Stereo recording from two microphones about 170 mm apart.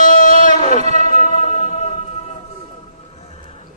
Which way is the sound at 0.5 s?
40° right (ahead or behind).